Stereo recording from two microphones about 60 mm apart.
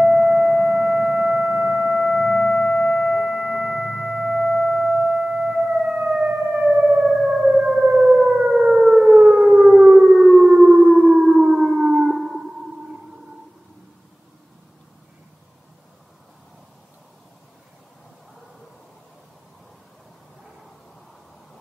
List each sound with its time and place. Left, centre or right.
0.0 s a sound: centre
6.0 s siren: centre
8.5 s civil defense siren: centre